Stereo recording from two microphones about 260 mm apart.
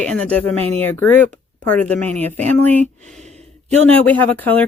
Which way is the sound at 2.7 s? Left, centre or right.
Right.